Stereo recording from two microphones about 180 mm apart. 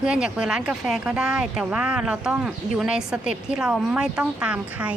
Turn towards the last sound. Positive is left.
turn(degrees=-5)  # may be behind; listen again after turning